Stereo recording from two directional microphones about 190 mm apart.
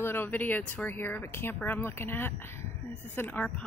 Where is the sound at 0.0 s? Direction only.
10° left (ahead or behind).